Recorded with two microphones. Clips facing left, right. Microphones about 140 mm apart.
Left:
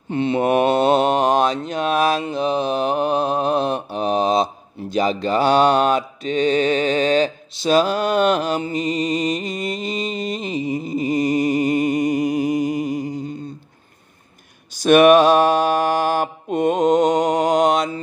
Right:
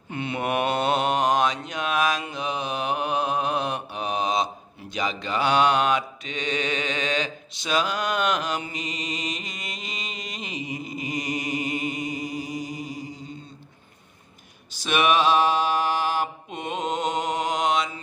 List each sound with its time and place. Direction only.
0.1 s mantra: 30° left (ahead or behind); by 13.2 s 50° left (ahead or behind)
14.8 s mantra: 50° left (ahead or behind)